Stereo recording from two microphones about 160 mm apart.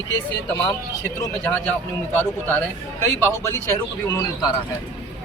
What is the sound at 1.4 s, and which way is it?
Speech, 10° left (ahead or behind).